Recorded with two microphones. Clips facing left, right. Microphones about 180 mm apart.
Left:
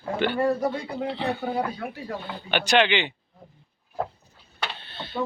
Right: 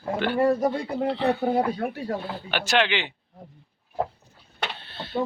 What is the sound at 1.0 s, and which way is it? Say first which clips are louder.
Speech: right 5 dB; centre (ahead or behind).